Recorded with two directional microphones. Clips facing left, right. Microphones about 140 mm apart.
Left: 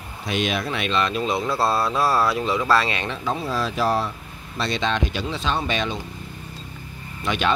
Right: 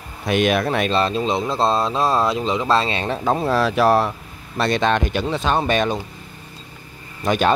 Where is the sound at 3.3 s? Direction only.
60° right (ahead or behind).